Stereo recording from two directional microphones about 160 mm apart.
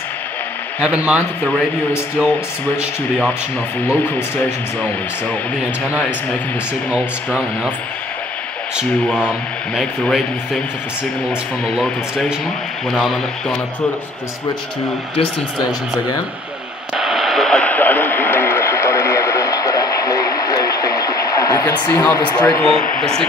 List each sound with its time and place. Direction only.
0.8 s speech: 5° right (ahead or behind)
3.9 s speech: 10° left (ahead or behind)
8.7 s speech: 5° right (ahead or behind)
11.7 s speech: centre (ahead or behind)
16.9 s radio: centre (ahead or behind); by 21.8 s 20° left (ahead or behind)
21.8 s speech: 15° left (ahead or behind)